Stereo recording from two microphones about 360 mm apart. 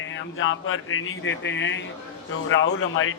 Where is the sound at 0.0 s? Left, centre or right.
Left.